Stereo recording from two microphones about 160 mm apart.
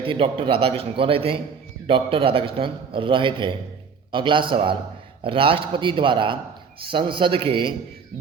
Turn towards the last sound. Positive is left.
turn(degrees=-35)  # may be behind; listen again after turning